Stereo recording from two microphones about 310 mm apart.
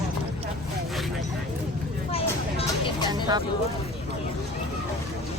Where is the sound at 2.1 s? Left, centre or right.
Centre.